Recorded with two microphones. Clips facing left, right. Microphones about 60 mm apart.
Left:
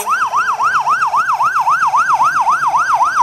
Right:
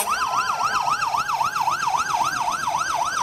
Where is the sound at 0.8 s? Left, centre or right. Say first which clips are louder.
Left 9 dB; left.